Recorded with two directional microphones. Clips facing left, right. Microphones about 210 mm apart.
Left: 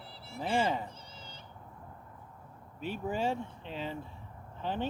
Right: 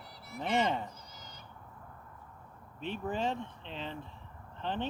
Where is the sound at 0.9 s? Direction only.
30° left (ahead or behind).